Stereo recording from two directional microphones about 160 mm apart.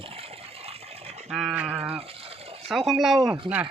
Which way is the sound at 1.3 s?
Centre (ahead or behind).